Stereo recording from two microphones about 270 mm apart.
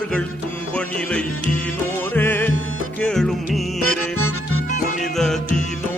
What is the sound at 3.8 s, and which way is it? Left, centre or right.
Music, left.